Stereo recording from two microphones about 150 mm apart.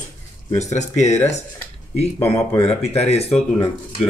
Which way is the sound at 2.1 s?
15° left (ahead or behind).